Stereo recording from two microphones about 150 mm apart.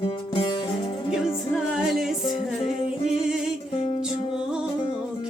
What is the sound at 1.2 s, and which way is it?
Music, 5° right (ahead or behind).